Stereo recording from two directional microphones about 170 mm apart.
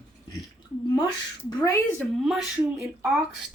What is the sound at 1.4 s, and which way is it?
Speech, 10° left (ahead or behind).